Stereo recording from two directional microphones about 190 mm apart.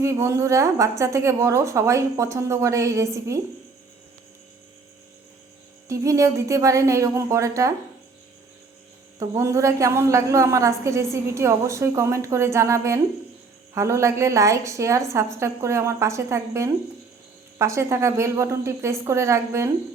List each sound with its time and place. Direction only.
0.0 s a woman's voice: 15° right (ahead or behind)
5.9 s a woman's voice: 15° right (ahead or behind)
9.1 s a woman's voice: 15° right (ahead or behind)